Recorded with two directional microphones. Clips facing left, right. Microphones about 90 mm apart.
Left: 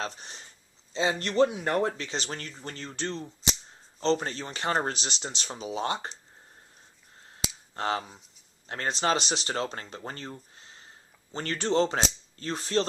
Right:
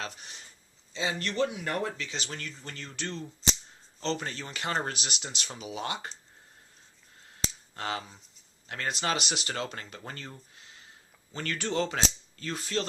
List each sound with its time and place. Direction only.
0.0 s speech: 35° left (ahead or behind)
7.7 s speech: 30° left (ahead or behind)
10.5 s a sound: 35° left (ahead or behind)
11.3 s speech: 30° left (ahead or behind)